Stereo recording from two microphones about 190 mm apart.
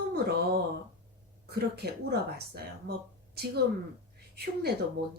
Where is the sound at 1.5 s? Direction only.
55° right (ahead or behind).